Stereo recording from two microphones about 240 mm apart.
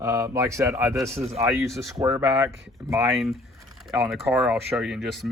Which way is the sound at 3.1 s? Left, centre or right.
Centre.